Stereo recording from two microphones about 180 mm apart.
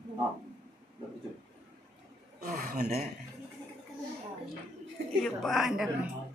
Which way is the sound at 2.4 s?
50° right (ahead or behind).